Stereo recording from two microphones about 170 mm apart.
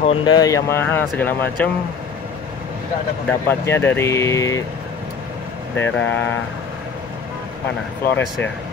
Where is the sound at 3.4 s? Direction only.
15° left (ahead or behind).